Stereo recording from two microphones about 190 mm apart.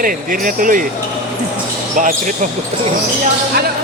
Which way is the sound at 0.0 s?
45° right (ahead or behind).